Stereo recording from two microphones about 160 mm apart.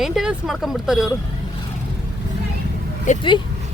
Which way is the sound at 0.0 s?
5° right (ahead or behind).